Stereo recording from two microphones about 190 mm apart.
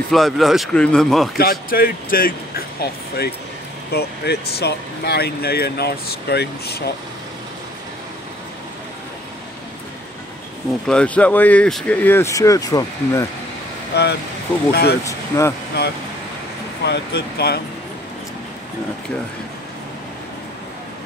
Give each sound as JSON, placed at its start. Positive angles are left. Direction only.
{"t": 0.1, "sound": "speech", "side_deg": 0}
{"t": 1.4, "sound": "speech", "side_deg": 50}
{"t": 10.9, "sound": "speech", "side_deg": 5}
{"t": 13.9, "sound": "speech", "side_deg": 60}
{"t": 15.0, "sound": "speech", "side_deg": 15}
{"t": 16.8, "sound": "speech", "side_deg": 60}